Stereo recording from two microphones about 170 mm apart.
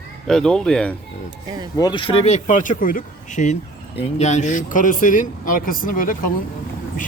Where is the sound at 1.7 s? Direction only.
25° left (ahead or behind).